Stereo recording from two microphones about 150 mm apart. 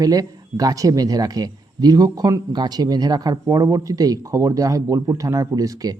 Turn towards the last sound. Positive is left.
turn(degrees=-25)  # may be behind; listen again after turning